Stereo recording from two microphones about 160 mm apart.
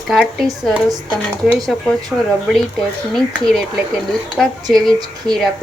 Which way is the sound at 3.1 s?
Centre (ahead or behind).